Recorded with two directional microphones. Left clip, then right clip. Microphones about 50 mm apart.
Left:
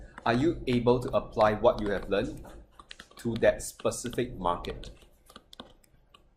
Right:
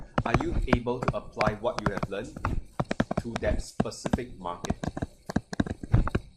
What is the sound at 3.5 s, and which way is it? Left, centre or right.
Speech, centre.